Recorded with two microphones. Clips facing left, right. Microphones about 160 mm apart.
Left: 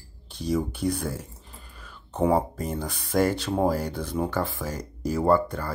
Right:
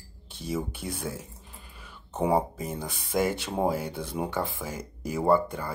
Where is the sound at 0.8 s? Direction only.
60° left (ahead or behind).